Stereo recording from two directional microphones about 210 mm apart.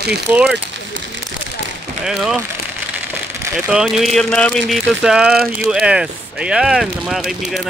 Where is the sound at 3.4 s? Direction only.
5° right (ahead or behind).